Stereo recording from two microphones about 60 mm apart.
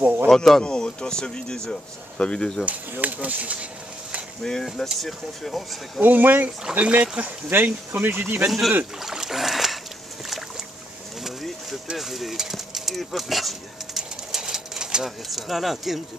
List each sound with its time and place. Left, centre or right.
0.0 s a sound: right
0.3 s speech: centre
2.6 s speech: right
4.4 s speech: centre
5.9 s speech: right
8.5 s speech: centre
9.0 s rowboat: centre
12.0 s a sound: centre
15.0 s speech: centre